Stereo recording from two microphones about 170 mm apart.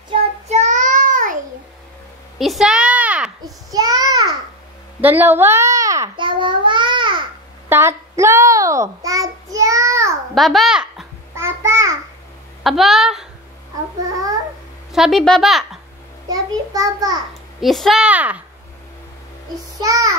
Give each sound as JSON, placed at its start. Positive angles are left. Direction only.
{"t": 0.1, "sound": "child singing", "side_deg": -40}
{"t": 2.3, "sound": "a sound", "side_deg": 0}
{"t": 3.4, "sound": "child singing", "side_deg": -20}
{"t": 5.0, "sound": "babbling", "side_deg": -10}
{"t": 7.7, "sound": "child singing", "side_deg": -15}
{"t": 10.3, "sound": "babbling", "side_deg": 0}
{"t": 11.3, "sound": "babbling", "side_deg": -15}
{"t": 12.6, "sound": "speech", "side_deg": 0}
{"t": 14.9, "sound": "a woman's voice", "side_deg": 0}
{"t": 16.3, "sound": "a child's voice", "side_deg": -20}
{"t": 17.3, "sound": "a woman's voice", "side_deg": 0}
{"t": 19.5, "sound": "a child's voice", "side_deg": -20}